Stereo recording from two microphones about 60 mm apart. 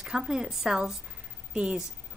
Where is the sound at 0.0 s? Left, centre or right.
Centre.